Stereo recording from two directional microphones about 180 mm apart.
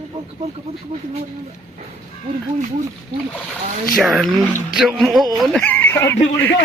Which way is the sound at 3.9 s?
Centre (ahead or behind).